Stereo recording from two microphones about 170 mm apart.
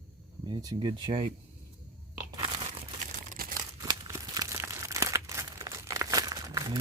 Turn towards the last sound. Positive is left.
turn(degrees=-20)  # may be behind; listen again after turning